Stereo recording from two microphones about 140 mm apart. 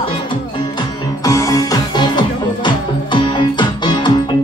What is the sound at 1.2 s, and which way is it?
Music, 25° left (ahead or behind).